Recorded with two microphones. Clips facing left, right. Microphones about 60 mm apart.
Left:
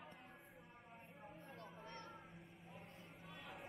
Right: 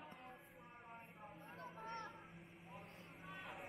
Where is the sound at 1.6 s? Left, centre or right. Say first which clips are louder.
Right 8 dB; right.